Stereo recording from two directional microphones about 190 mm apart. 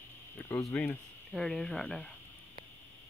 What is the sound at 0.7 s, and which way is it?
Speech, 5° left (ahead or behind).